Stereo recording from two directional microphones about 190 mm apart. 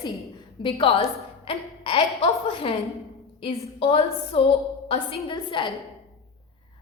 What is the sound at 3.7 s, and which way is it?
A woman's voice, 30° left (ahead or behind).